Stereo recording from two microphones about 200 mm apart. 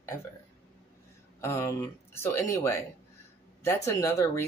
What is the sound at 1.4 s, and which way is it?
Speech, 15° left (ahead or behind).